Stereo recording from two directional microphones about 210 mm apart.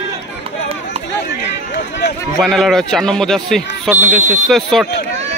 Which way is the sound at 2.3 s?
Centre (ahead or behind).